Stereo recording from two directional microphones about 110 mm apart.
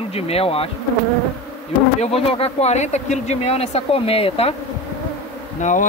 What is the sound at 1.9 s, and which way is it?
Speech, 60° left (ahead or behind).